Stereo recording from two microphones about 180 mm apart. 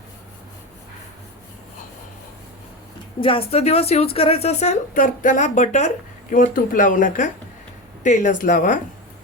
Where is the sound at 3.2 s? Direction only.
30° left (ahead or behind).